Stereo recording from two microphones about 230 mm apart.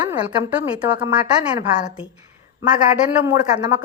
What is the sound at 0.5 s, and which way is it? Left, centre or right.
Speech, centre.